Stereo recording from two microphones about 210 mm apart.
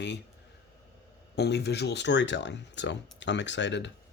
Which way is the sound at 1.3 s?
50° left (ahead or behind).